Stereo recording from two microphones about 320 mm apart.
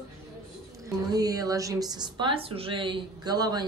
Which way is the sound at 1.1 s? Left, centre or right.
Centre.